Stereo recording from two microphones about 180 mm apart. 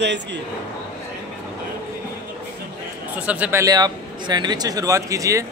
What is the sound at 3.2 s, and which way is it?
A man's voice, 10° right (ahead or behind).